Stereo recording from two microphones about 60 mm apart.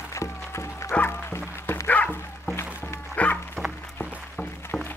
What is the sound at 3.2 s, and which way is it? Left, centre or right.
Music, left.